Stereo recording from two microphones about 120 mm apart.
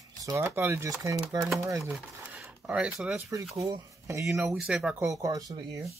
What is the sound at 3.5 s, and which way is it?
Speech, 30° right (ahead or behind).